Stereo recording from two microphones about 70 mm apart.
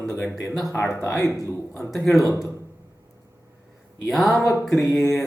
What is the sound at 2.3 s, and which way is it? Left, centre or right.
Speech, left.